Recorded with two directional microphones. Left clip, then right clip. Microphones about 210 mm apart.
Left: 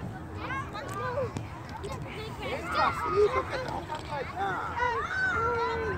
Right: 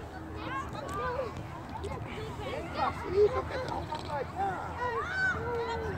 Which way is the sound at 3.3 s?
40° left (ahead or behind).